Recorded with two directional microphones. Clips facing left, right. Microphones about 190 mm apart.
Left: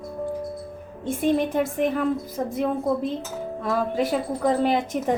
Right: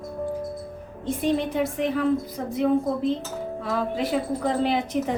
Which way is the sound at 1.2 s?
50° left (ahead or behind).